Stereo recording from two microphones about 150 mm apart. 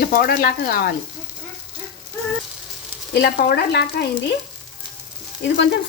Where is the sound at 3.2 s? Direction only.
90° left.